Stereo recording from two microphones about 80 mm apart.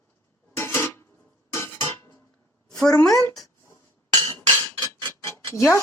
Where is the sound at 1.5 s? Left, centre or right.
Left.